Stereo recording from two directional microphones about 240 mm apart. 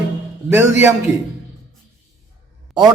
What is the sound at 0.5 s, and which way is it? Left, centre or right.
Speech, centre.